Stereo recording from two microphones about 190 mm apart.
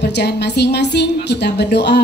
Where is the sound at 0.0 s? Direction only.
60° left (ahead or behind).